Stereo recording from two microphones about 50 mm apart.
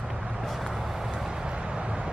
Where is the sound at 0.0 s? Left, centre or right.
Centre.